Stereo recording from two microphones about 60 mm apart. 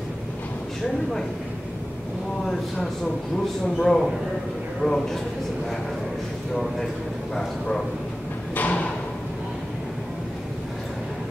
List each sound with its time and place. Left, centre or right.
3.6 s a man's voice: centre
6.5 s a man's voice: centre
8.5 s a sound: left